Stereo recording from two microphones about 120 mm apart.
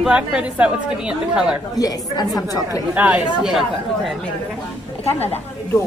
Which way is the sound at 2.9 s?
10° right (ahead or behind).